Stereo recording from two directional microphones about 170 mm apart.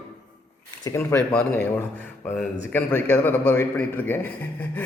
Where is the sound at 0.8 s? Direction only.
15° left (ahead or behind).